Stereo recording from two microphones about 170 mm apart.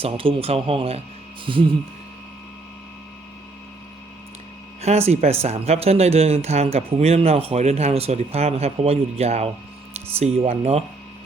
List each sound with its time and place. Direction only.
0.0 s speech: 30° right (ahead or behind)
4.8 s speech: 40° right (ahead or behind)